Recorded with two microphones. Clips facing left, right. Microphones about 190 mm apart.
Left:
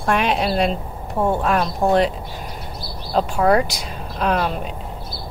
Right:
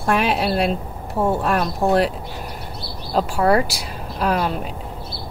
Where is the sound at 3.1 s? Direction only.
5° right (ahead or behind).